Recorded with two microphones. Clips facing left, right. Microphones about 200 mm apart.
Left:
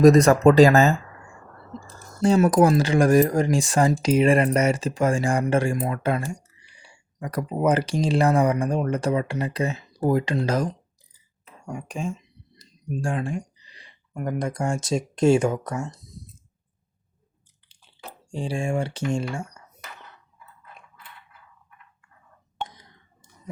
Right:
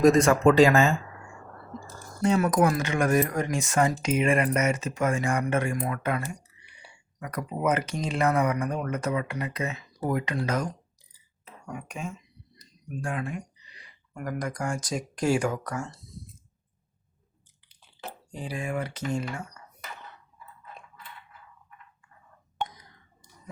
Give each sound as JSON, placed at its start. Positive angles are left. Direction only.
{"t": 0.0, "sound": "speech", "side_deg": 40}
{"t": 2.2, "sound": "speech", "side_deg": 30}
{"t": 18.3, "sound": "speech", "side_deg": 30}